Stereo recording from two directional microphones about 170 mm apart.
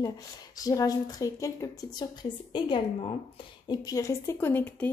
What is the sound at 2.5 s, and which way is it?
Speech, 30° left (ahead or behind).